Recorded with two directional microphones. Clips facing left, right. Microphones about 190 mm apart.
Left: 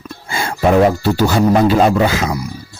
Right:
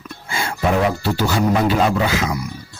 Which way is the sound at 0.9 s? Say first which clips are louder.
Left 5 dB; 40° left (ahead or behind).